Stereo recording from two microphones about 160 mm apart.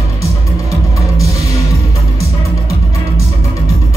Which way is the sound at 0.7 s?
20° left (ahead or behind).